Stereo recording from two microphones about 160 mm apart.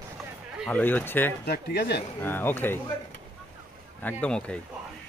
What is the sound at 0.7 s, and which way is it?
Speech, 10° left (ahead or behind).